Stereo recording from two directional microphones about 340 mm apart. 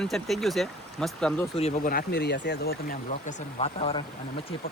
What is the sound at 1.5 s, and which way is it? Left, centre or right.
Speech, left.